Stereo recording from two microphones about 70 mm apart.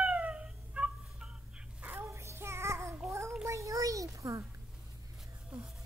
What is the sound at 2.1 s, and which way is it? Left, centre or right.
Child singing, right.